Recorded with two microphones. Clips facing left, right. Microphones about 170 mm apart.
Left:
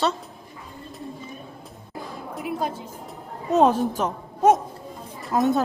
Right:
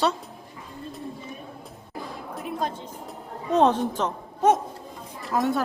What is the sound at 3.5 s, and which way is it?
A woman's voice, 10° left (ahead or behind).